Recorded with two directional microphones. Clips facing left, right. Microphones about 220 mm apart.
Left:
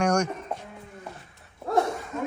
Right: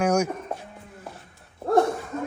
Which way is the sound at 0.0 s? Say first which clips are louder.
Right 2 dB; 5° right (ahead or behind).